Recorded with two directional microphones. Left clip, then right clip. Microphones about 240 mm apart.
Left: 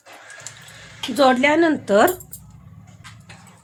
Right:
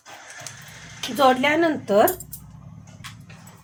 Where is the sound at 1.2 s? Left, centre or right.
Left.